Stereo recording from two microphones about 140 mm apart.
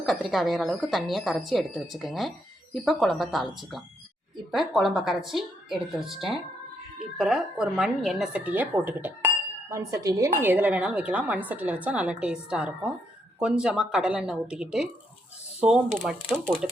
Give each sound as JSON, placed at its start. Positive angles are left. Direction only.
{"t": 0.0, "sound": "speech", "side_deg": 0}
{"t": 10.4, "sound": "a woman's voice", "side_deg": -15}
{"t": 16.0, "sound": "speech", "side_deg": -5}